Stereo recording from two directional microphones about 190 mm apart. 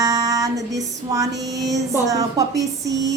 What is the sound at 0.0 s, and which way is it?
Female singing, 20° right (ahead or behind).